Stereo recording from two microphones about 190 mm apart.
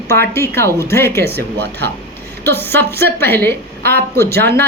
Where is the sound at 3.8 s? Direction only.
55° right (ahead or behind).